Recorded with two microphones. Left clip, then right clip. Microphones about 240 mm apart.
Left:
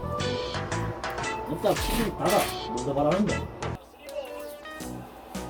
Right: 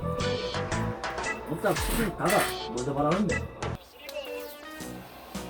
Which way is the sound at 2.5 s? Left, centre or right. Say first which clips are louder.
Left 2 dB; centre.